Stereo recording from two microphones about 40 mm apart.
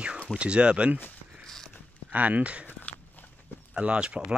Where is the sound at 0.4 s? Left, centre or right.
Right.